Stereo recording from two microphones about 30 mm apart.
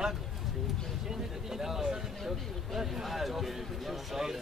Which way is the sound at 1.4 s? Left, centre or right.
Centre.